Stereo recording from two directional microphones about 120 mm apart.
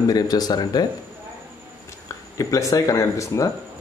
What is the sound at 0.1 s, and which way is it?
Speech, 35° left (ahead or behind).